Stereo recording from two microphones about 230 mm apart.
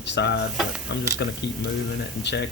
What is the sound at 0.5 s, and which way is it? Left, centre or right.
Speech, centre.